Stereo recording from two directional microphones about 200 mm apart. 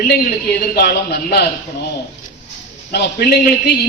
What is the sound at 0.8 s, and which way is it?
Speech, 55° left (ahead or behind).